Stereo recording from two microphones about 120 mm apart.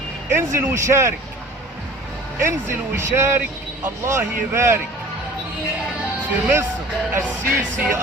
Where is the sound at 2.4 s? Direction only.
20° right (ahead or behind).